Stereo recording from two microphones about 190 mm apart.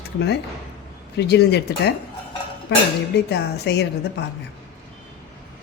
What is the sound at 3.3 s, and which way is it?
Speech, 65° left (ahead or behind).